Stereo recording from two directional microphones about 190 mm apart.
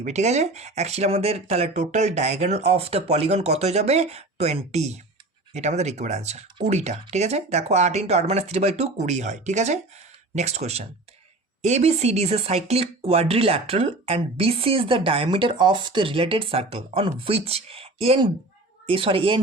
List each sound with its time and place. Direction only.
0.0 s speech: 35° right (ahead or behind)